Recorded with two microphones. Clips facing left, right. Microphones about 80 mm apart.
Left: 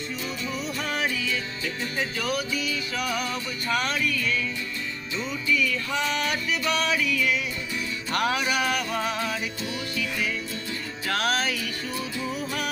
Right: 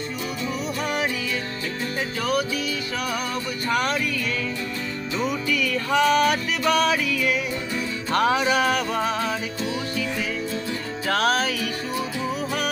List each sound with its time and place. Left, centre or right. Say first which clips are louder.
0.9 s music: right 2 dB; centre
2.0 s music: right 4 dB; right
3.7 s music: right 2 dB; right
5.1 s music: right 2 dB; right
8.1 s music: right 5 dB; right